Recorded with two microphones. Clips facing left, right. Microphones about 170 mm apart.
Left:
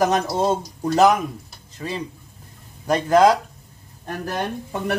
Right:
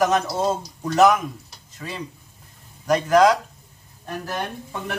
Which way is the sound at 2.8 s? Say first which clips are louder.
Left 1 dB; 30° left (ahead or behind).